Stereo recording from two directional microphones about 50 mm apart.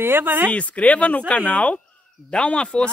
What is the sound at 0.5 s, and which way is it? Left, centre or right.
Speech, left.